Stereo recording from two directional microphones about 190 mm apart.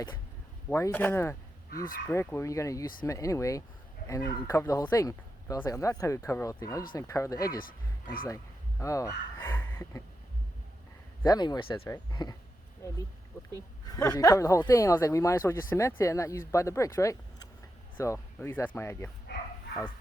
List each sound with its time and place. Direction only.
0.7 s speech: 15° left (ahead or behind)
8.8 s speech: 15° left (ahead or behind)
11.2 s speech: 20° left (ahead or behind)
13.5 s speech: 15° left (ahead or behind)